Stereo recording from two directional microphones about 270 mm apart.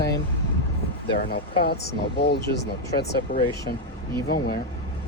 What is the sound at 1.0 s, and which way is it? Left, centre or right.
Speech, left.